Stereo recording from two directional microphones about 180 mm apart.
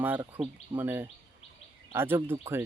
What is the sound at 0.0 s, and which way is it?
Speech, 10° right (ahead or behind).